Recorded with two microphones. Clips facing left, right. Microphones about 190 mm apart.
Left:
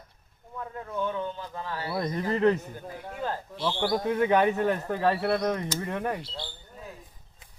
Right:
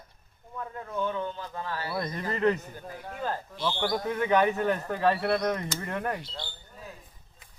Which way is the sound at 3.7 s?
25° left (ahead or behind).